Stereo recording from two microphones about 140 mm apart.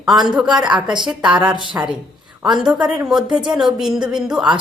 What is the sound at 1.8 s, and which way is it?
Speech, 15° right (ahead or behind).